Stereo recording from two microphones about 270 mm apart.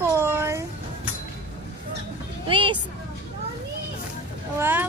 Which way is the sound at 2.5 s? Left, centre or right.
Centre.